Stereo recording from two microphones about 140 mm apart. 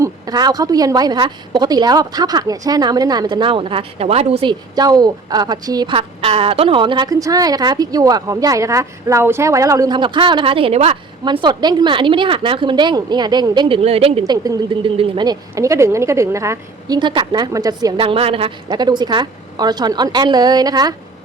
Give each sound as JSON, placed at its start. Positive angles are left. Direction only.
{"t": 0.0, "sound": "a woman's voice", "side_deg": -30}
{"t": 4.7, "sound": "a woman's voice", "side_deg": -30}
{"t": 6.0, "sound": "a woman's voice", "side_deg": -45}
{"t": 11.3, "sound": "a woman's voice", "side_deg": -30}
{"t": 14.3, "sound": "a woman's voice", "side_deg": -25}
{"t": 14.8, "sound": "a woman's voice", "side_deg": -40}
{"t": 17.0, "sound": "a woman's voice", "side_deg": -35}
{"t": 17.9, "sound": "a woman's voice", "side_deg": -40}
{"t": 18.7, "sound": "a woman's voice", "side_deg": -30}